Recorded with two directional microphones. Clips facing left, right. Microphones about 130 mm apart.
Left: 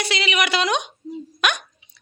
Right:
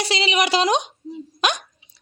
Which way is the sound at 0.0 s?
35° right (ahead or behind).